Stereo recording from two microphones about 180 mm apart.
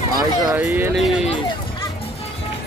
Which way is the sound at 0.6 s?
10° right (ahead or behind).